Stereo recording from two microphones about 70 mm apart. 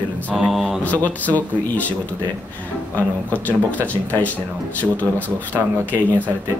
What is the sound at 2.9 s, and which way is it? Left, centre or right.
Speech, left.